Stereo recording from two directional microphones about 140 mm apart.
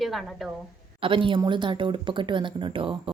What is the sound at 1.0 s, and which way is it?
Speech, 40° right (ahead or behind).